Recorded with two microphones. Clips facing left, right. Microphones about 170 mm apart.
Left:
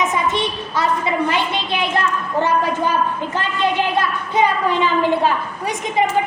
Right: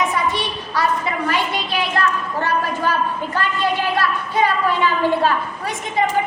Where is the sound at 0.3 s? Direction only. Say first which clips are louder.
Left 2 dB; 20° left (ahead or behind).